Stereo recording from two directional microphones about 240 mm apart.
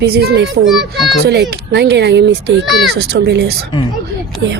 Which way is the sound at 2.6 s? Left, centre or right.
Centre.